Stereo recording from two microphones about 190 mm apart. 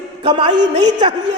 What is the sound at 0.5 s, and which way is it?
Speech, 65° right (ahead or behind).